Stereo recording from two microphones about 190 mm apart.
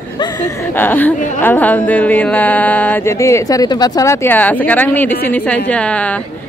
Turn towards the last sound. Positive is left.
turn(degrees=5)  # may be behind; listen again after turning